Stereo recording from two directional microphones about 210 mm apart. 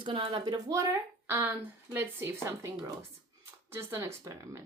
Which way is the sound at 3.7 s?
15° right (ahead or behind).